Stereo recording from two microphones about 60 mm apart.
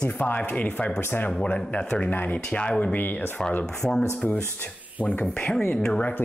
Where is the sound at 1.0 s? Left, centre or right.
Left.